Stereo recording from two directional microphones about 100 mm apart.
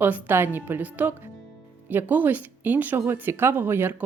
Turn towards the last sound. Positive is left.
turn(degrees=-20)  # may be behind; listen again after turning